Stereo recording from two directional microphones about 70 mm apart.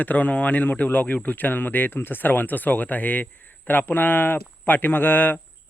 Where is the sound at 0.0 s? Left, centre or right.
Left.